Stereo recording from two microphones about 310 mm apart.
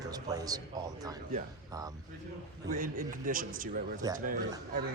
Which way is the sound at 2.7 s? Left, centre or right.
Right.